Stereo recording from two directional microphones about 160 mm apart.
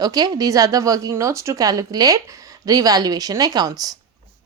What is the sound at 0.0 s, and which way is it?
Speech, 25° right (ahead or behind).